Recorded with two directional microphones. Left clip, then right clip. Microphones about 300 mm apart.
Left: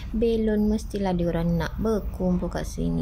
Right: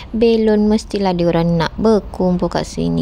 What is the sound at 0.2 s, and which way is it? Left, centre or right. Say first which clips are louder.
Speech: right 10 dB; right.